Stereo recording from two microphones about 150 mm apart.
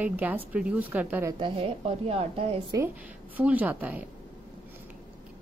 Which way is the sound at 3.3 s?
10° right (ahead or behind).